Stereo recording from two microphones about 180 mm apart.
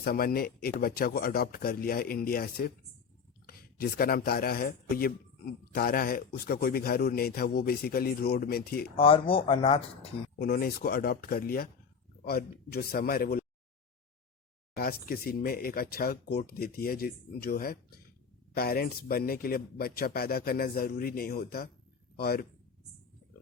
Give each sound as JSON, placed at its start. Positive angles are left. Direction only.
{"t": 0.0, "sound": "speech", "side_deg": 55}
{"t": 9.0, "sound": "speech", "side_deg": 30}
{"t": 10.3, "sound": "speech", "side_deg": 55}
{"t": 14.8, "sound": "a man's voice", "side_deg": 55}